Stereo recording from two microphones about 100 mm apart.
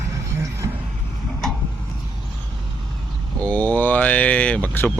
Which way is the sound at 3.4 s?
15° left (ahead or behind).